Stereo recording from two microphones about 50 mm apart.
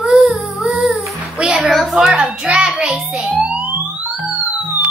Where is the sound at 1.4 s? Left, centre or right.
Centre.